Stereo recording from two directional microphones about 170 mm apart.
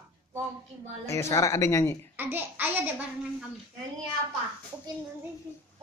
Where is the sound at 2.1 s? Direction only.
10° right (ahead or behind).